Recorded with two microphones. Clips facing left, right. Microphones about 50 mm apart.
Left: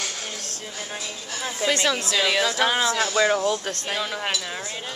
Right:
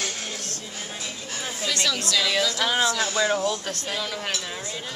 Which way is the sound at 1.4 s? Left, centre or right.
Left.